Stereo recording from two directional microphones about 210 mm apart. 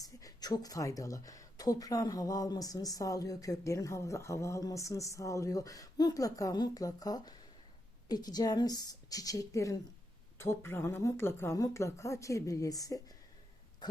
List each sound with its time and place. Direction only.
0.0 s speech: 15° left (ahead or behind)